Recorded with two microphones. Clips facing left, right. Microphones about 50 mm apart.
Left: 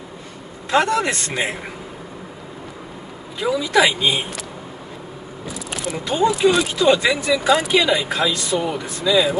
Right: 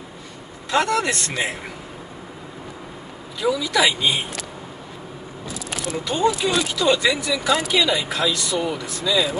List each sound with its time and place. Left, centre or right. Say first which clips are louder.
0.7 s speech: left 2 dB; left
3.3 s speech: left 3 dB; left
6.0 s speech: left 4 dB; left